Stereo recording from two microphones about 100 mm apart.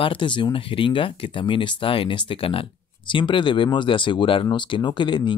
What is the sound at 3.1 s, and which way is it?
Speech, 55° left (ahead or behind).